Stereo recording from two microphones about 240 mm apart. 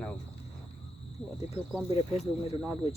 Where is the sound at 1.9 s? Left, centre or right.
Left.